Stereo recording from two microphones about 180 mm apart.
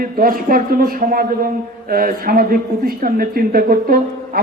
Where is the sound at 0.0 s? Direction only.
50° right (ahead or behind).